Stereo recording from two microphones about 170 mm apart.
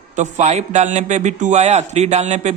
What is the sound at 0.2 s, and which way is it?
A man's voice, 40° right (ahead or behind).